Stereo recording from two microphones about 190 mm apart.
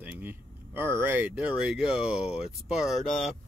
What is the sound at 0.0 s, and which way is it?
Speech, 10° right (ahead or behind).